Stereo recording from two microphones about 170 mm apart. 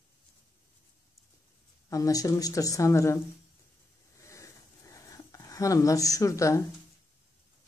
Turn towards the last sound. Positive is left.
turn(degrees=20)  # may be behind; listen again after turning